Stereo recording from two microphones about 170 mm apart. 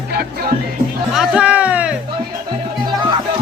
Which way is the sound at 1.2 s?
5° right (ahead or behind).